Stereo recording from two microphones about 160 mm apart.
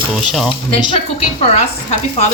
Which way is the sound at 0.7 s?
30° left (ahead or behind).